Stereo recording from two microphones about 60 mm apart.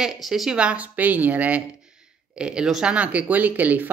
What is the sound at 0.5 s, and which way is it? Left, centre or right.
A woman's voice, right.